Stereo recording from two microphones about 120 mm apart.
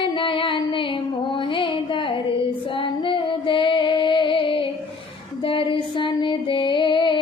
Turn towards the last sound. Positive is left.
turn(degrees=40)  # may be behind; listen again after turning